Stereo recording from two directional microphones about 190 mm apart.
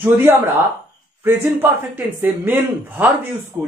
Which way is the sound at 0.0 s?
10° right (ahead or behind).